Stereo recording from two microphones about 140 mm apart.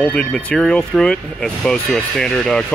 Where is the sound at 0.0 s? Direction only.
10° left (ahead or behind).